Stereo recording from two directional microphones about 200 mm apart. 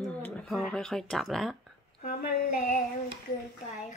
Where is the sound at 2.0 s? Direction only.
40° left (ahead or behind).